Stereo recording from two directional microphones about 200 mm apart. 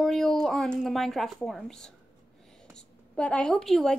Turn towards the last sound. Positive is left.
turn(degrees=0)  # may be behind; listen again after turning